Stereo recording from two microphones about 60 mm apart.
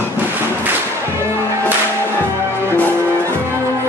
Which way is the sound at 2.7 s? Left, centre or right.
Left.